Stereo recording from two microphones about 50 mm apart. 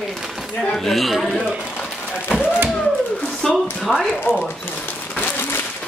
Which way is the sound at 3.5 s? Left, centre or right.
Centre.